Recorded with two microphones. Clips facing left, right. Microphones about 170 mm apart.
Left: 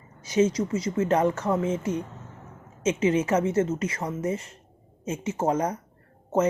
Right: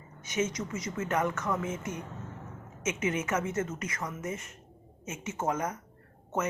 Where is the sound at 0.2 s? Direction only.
35° left (ahead or behind).